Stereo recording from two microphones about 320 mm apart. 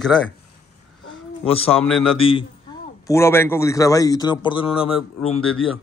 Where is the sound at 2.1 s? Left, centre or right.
Centre.